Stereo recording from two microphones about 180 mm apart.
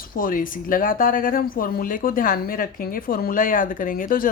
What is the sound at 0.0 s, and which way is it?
Speech, 50° left (ahead or behind).